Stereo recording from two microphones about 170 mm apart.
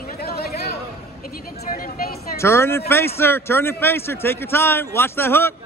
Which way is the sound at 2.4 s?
15° left (ahead or behind).